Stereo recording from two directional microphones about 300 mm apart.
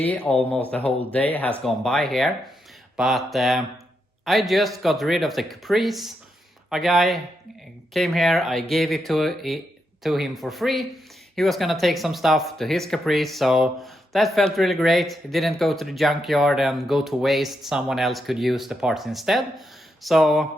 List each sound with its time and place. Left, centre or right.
0.0 s speech: centre